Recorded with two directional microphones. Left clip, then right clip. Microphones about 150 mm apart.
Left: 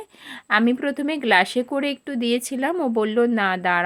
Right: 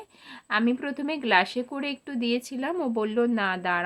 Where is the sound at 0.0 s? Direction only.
35° left (ahead or behind).